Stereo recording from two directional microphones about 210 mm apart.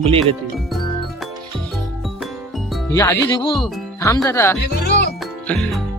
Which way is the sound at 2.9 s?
15° left (ahead or behind).